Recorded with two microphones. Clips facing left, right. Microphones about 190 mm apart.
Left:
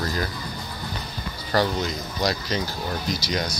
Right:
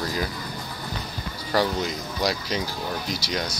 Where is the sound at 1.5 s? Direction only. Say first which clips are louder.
Left 1 dB; 10° right (ahead or behind).